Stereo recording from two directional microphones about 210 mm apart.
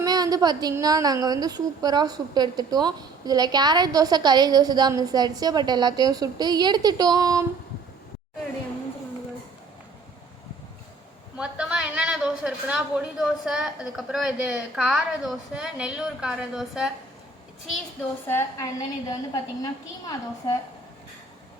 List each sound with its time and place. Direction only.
0.0 s a woman's voice: 20° right (ahead or behind)
11.3 s a woman's voice: 5° right (ahead or behind)
18.3 s a woman's voice: 10° left (ahead or behind)